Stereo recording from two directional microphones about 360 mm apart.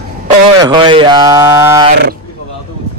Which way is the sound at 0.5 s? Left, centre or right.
Centre.